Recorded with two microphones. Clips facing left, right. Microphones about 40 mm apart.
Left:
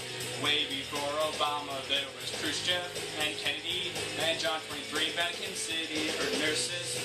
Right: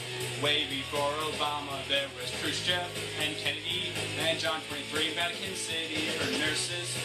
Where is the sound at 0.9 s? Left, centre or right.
Centre.